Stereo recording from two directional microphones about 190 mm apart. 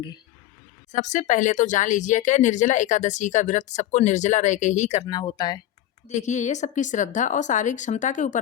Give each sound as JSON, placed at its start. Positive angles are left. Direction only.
{"t": 0.9, "sound": "speech", "side_deg": 40}
{"t": 5.0, "sound": "speech", "side_deg": 20}
{"t": 6.1, "sound": "speech", "side_deg": 40}